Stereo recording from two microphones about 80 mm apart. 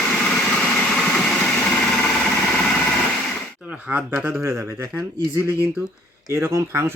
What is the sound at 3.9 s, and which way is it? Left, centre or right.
Speech, right.